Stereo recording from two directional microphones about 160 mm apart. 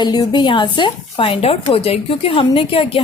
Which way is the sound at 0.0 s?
25° left (ahead or behind).